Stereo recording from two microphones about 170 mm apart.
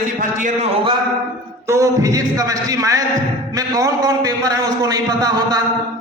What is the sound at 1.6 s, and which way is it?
A man's voice, 15° right (ahead or behind).